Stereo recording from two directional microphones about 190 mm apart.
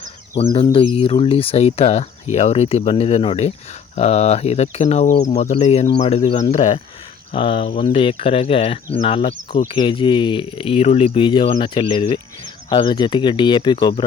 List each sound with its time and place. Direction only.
0.5 s speech: 30° left (ahead or behind)